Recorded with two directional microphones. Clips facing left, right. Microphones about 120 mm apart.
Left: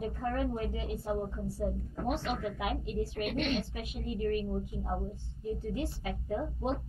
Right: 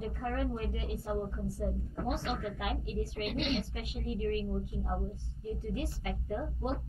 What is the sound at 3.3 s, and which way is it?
Speech, 45° left (ahead or behind).